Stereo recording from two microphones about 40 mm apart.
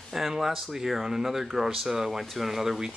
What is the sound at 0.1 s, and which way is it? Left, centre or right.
Speech, centre.